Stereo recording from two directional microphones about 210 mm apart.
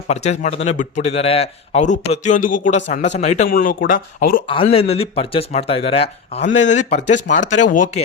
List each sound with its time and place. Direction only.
0.1 s a man's voice: 30° left (ahead or behind)
4.4 s a man's voice: 25° left (ahead or behind)